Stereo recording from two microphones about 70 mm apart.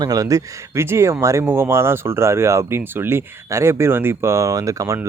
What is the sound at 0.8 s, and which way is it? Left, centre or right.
Speech, right.